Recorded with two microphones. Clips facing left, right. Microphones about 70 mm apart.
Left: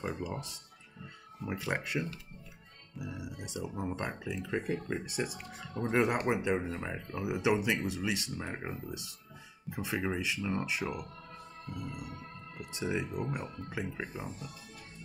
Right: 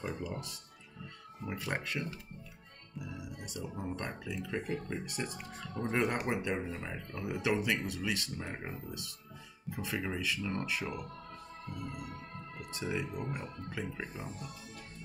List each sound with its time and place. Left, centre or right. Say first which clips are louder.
0.0 s speech: left 2 dB; centre
1.5 s speech: left 3 dB; centre
12.5 s speech: left 3 dB; left
13.9 s speech: left 2 dB; centre